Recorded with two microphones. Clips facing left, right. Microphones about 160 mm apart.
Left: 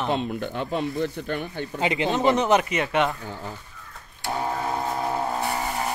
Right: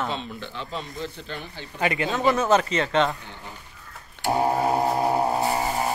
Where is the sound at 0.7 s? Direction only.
55° left (ahead or behind).